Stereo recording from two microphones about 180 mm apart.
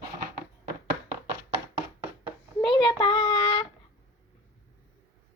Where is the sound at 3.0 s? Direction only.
25° left (ahead or behind).